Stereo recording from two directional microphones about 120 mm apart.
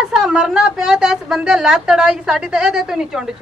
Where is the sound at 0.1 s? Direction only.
5° right (ahead or behind).